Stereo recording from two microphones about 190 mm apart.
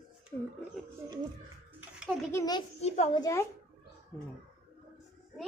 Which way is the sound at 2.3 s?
20° left (ahead or behind).